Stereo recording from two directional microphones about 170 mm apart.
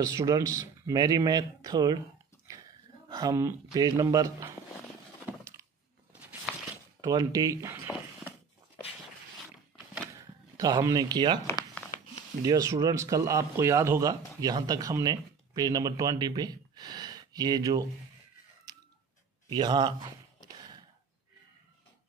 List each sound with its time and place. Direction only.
0.0 s speech: 20° right (ahead or behind)
3.1 s speech: 20° right (ahead or behind)
7.0 s speech: 20° right (ahead or behind)
10.6 s speech: 20° right (ahead or behind)
11.4 s a sound: 15° left (ahead or behind)
12.4 s speech: 20° right (ahead or behind)
19.5 s speech: 25° right (ahead or behind)
20.4 s sigh: 25° right (ahead or behind)